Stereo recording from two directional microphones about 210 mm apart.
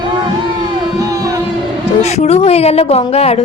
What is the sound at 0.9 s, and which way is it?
Music, 15° right (ahead or behind).